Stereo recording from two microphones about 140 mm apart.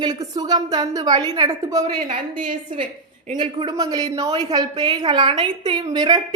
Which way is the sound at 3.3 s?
35° right (ahead or behind).